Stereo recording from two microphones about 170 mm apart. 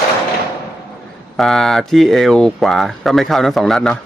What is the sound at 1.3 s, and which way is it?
Speech, centre (ahead or behind).